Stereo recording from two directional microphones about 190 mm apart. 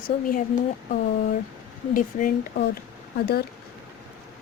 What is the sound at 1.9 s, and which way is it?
Speech, 50° left (ahead or behind).